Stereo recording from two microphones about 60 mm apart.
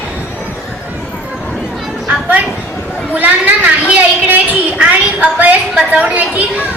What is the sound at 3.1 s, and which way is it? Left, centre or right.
Speech, right.